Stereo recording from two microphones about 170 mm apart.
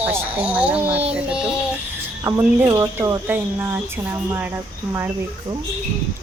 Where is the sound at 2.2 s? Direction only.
20° right (ahead or behind).